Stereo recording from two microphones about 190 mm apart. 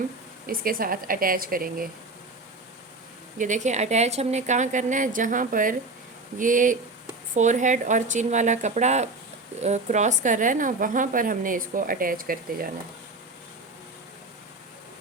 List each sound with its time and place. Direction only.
0.4 s a woman's voice: 50° right (ahead or behind)
3.3 s a woman's voice: 40° right (ahead or behind)